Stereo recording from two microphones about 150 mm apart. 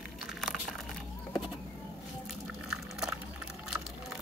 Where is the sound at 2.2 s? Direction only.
5° right (ahead or behind).